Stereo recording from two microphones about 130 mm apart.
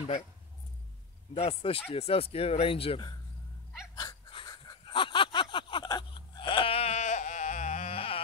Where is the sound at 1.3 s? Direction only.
45° left (ahead or behind).